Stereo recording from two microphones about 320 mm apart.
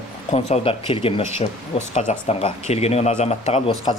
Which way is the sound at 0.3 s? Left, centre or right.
Centre.